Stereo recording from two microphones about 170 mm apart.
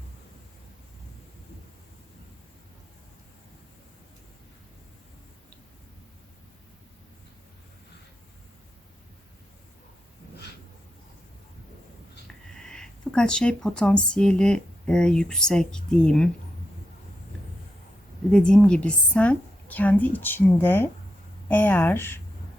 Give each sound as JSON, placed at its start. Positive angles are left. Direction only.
{"t": 12.5, "sound": "speech", "side_deg": 5}
{"t": 18.3, "sound": "a woman's voice", "side_deg": 5}